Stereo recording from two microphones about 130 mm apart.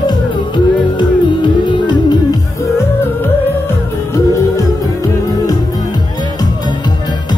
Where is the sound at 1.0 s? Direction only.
40° left (ahead or behind).